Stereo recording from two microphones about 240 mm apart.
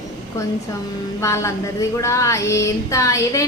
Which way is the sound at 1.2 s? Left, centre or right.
Centre.